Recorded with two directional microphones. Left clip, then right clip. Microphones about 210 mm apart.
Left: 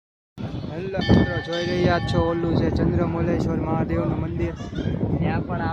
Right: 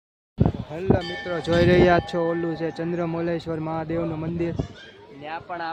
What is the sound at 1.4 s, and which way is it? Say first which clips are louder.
Speech: right 6 dB; 55° right (ahead or behind).